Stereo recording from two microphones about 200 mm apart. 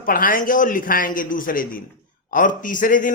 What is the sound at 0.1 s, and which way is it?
A man's voice, 45° left (ahead or behind).